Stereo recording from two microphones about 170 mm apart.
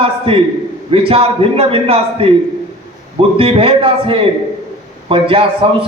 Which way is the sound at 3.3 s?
35° right (ahead or behind).